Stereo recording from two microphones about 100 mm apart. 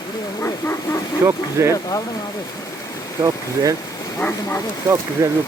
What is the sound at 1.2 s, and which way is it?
Speech, 30° right (ahead or behind).